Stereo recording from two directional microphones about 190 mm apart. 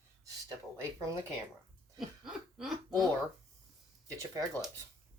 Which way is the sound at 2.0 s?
Centre (ahead or behind).